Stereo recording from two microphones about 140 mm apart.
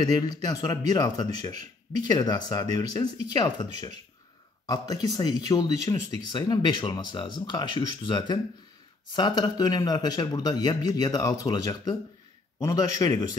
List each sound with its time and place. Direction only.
0.0 s speech: 30° left (ahead or behind)